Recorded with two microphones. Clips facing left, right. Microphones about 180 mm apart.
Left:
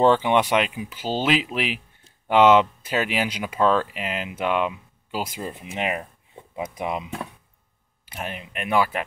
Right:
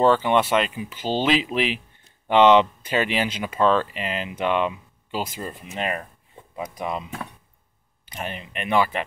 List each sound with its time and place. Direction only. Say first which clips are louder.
0.0 s speech: even; 15° left (ahead or behind)
5.6 s speech: left 1 dB; 15° left (ahead or behind)
8.0 s speech: right 1 dB; 10° left (ahead or behind)